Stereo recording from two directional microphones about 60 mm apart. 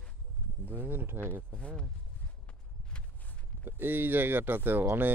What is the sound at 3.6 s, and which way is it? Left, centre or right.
Speech, right.